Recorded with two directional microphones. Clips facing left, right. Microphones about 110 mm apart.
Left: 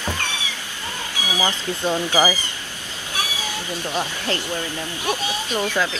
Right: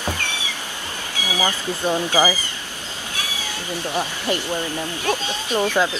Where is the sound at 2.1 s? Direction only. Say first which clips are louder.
Even; 15° left (ahead or behind).